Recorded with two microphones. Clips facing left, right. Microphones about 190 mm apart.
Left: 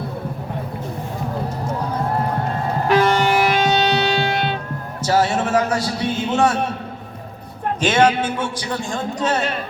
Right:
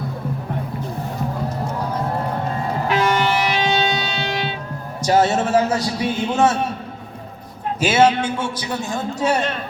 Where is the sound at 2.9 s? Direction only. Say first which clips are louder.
Left 3 dB; 45° left (ahead or behind).